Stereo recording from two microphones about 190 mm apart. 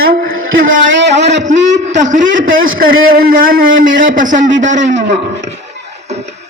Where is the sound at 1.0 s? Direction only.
65° right (ahead or behind).